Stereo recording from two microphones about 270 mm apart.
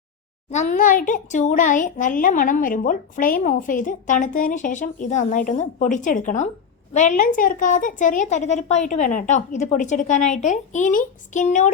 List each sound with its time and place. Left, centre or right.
0.5 s a child's voice: left